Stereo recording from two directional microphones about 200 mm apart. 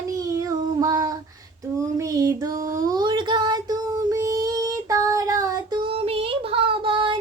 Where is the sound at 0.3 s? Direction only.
15° right (ahead or behind).